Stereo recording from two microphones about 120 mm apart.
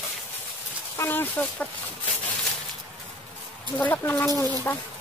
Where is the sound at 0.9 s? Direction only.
15° left (ahead or behind).